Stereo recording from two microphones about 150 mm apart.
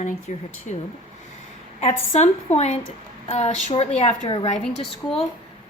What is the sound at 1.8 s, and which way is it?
A woman's voice, 45° left (ahead or behind).